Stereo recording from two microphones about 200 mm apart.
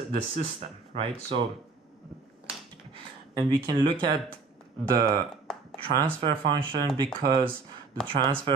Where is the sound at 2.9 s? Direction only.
20° right (ahead or behind).